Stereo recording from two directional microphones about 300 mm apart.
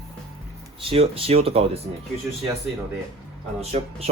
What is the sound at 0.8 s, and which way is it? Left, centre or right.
Speech, centre.